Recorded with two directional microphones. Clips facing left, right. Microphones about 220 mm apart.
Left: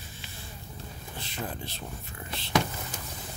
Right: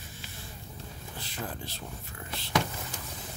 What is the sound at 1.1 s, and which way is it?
Speech, 25° left (ahead or behind).